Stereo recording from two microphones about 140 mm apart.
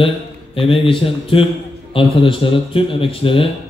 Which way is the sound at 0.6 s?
40° left (ahead or behind).